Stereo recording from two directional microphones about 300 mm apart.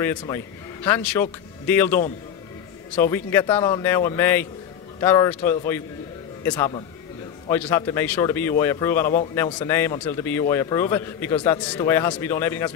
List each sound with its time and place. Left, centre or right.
0.0 s a man's voice: centre